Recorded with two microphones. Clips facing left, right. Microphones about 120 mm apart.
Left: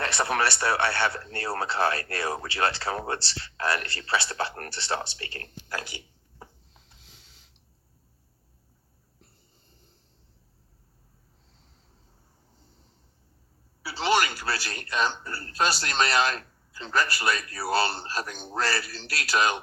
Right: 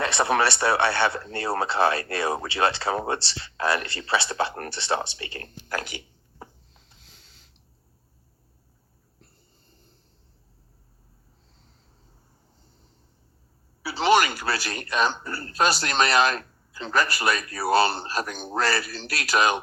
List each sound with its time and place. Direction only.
0.0 s speech: 20° right (ahead or behind)
7.0 s a sound: 15° left (ahead or behind)
13.8 s a man's voice: 15° right (ahead or behind)